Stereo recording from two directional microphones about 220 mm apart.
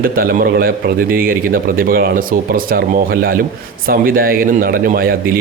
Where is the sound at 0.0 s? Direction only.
40° right (ahead or behind).